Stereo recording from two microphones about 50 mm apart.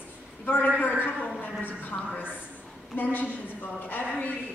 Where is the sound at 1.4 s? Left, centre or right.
Left.